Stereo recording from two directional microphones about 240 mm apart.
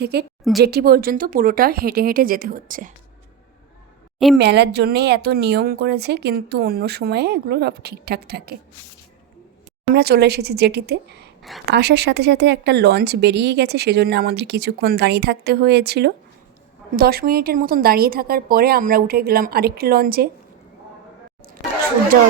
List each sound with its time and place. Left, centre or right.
0.0 s a woman's voice: right
4.4 s speech: right
9.9 s a woman's voice: right